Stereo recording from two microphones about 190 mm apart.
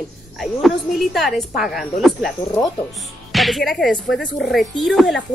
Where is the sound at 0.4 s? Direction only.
Centre (ahead or behind).